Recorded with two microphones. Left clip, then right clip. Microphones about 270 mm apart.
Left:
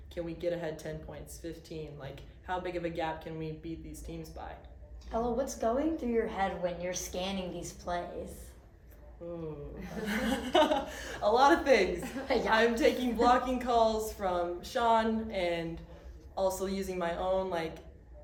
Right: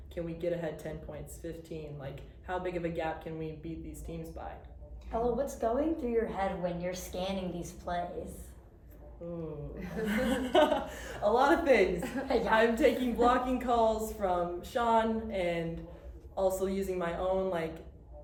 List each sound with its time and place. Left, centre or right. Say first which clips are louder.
0.1 s a woman's voice: even; centre
5.2 s a woman's voice: right 1 dB; left
9.7 s a woman's voice: right 3 dB; centre